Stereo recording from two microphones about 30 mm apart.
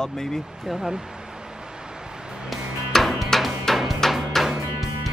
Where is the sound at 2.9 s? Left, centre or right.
Centre.